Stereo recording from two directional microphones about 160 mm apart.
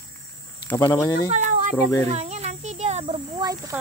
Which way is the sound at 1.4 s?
50° right (ahead or behind).